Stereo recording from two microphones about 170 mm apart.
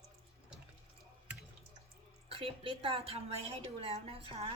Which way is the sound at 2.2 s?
35° right (ahead or behind).